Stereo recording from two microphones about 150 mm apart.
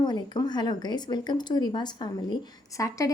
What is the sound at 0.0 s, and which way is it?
Speech, 30° left (ahead or behind).